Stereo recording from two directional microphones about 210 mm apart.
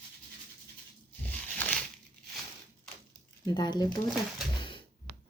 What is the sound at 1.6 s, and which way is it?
Crumpling, 5° left (ahead or behind).